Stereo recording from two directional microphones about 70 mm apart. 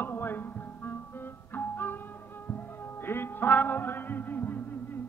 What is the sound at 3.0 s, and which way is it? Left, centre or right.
Music, left.